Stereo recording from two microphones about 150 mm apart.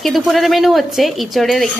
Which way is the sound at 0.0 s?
Centre (ahead or behind).